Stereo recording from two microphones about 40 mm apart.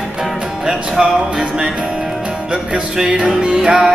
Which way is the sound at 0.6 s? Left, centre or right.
Centre.